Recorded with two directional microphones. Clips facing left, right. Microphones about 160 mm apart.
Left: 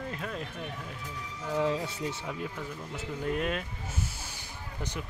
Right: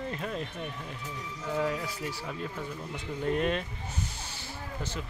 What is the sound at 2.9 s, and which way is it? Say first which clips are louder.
Speech: right 2 dB; 5° left (ahead or behind).